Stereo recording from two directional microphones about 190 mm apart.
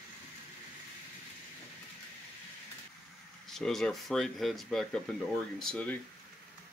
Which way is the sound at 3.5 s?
Centre (ahead or behind).